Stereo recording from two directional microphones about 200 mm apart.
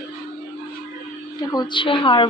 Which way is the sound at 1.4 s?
20° left (ahead or behind).